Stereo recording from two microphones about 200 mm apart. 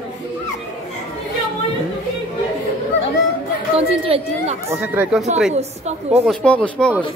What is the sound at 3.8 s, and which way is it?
Chatter, 30° right (ahead or behind).